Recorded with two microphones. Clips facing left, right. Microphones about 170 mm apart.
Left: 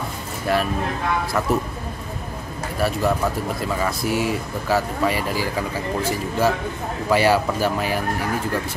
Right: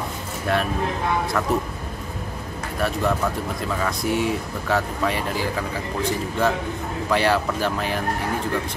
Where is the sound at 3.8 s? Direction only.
5° left (ahead or behind).